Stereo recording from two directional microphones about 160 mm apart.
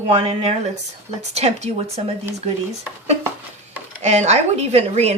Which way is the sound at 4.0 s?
45° right (ahead or behind).